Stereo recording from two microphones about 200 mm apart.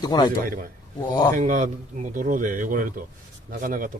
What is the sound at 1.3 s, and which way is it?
Speech, 40° right (ahead or behind).